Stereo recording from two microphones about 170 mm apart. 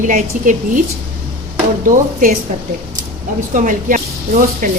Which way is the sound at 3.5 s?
50° right (ahead or behind).